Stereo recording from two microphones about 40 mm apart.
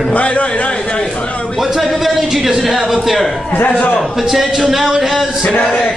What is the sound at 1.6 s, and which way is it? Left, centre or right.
A man's voice, centre.